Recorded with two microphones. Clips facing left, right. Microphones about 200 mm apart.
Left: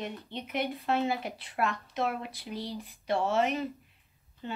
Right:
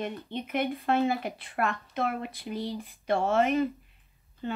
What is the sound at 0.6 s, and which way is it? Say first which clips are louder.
Speech: right 2 dB; centre (ahead or behind).